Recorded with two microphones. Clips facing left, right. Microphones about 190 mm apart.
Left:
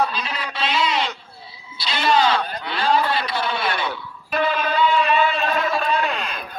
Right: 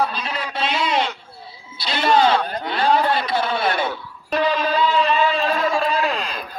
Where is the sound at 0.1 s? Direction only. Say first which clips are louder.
Right 1 dB; 55° right (ahead or behind).